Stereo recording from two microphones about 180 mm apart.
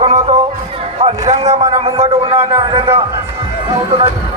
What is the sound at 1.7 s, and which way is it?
A man's voice, 35° right (ahead or behind).